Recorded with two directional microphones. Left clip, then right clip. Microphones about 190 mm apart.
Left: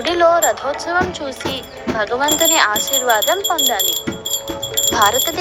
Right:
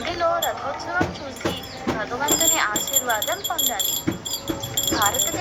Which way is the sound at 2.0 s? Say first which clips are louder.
Left 8 dB; 45° left (ahead or behind).